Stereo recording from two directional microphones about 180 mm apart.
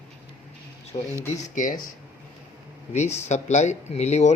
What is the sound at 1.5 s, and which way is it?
Speech, 45° left (ahead or behind).